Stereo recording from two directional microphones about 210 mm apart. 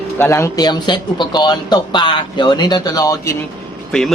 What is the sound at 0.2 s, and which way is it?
Speech, 15° left (ahead or behind).